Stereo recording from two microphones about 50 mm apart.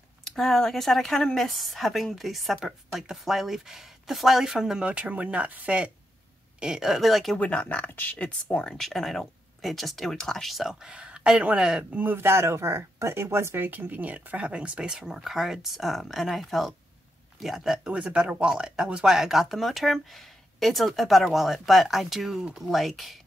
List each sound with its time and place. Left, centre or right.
0.2 s speech: centre
4.8 s speech: right
6.6 s speech: centre
7.3 s speech: left
8.2 s speech: left
8.6 s speech: centre
12.2 s speech: right
13.7 s speech: right; by 15.0 s centre
15.0 s speech: centre
17.8 s speech: right; by 23.1 s centre